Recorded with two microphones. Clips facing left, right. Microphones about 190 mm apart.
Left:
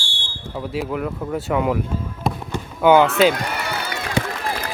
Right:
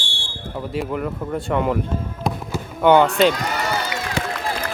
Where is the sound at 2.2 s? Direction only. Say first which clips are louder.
Even; 5° left (ahead or behind).